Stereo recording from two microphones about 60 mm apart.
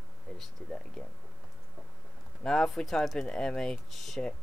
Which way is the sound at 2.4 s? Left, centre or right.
Centre.